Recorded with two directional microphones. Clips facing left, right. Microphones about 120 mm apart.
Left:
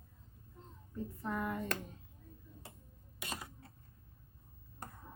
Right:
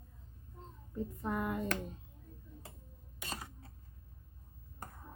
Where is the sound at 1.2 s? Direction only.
20° right (ahead or behind).